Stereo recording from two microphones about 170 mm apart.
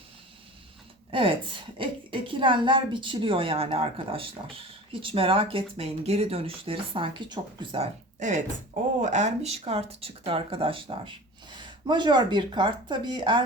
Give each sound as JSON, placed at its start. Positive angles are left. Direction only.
{"t": 1.1, "sound": "a woman's voice", "side_deg": -30}
{"t": 8.2, "sound": "a woman's voice", "side_deg": -45}